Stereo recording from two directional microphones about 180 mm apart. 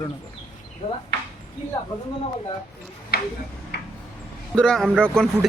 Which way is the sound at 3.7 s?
65° left (ahead or behind).